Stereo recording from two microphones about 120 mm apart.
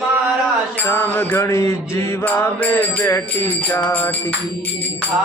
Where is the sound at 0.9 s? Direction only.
20° left (ahead or behind).